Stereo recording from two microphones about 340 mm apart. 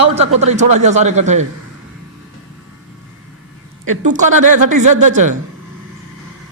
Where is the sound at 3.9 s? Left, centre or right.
Right.